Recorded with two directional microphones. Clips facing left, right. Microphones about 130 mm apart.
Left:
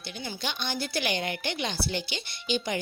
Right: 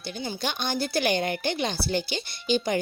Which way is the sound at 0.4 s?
45° right (ahead or behind).